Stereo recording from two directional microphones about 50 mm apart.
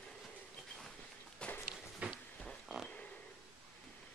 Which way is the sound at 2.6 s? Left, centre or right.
Centre.